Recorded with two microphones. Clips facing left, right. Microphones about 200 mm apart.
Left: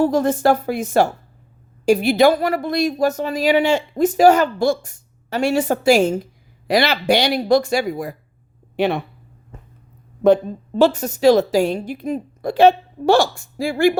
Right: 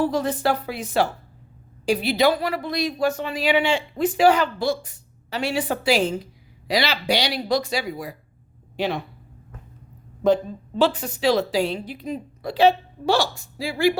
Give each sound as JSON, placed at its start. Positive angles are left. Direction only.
{"t": 0.0, "sound": "speech", "side_deg": 45}
{"t": 10.2, "sound": "speech", "side_deg": 50}